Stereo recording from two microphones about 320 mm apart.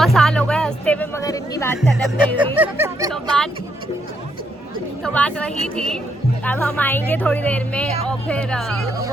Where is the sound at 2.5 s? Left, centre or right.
Centre.